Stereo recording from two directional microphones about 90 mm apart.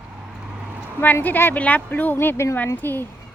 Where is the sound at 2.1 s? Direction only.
30° left (ahead or behind).